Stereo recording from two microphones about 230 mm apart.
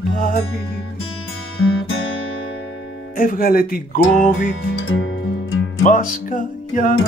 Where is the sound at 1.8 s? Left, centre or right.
Left.